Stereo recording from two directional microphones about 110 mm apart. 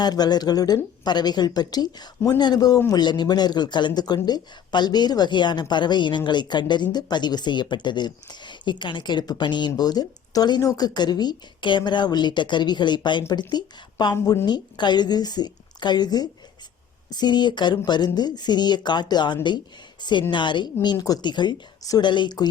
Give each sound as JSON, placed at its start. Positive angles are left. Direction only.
{"t": 0.0, "sound": "a woman's voice", "side_deg": 40}